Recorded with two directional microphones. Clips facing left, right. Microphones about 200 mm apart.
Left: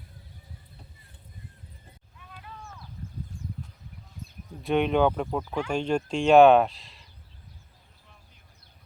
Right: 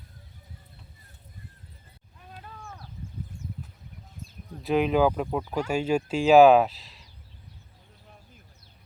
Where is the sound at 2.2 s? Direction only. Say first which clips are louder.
Right 1 dB; 50° right (ahead or behind).